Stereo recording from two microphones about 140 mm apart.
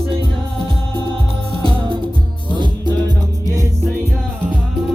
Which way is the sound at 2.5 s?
35° right (ahead or behind).